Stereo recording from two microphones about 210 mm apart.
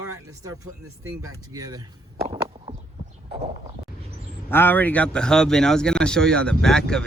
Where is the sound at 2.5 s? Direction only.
25° right (ahead or behind).